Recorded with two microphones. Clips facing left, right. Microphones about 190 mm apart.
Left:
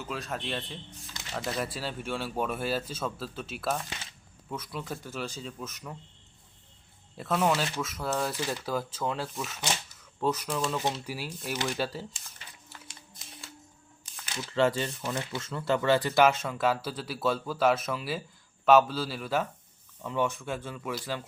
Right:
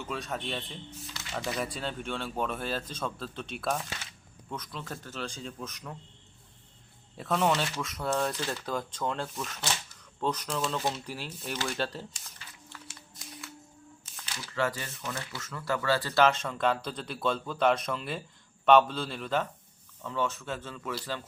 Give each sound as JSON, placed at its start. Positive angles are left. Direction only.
{"t": 0.0, "sound": "speech", "side_deg": 0}
{"t": 7.2, "sound": "speech", "side_deg": 0}
{"t": 12.9, "sound": "a sound", "side_deg": 20}
{"t": 14.3, "sound": "speech", "side_deg": 25}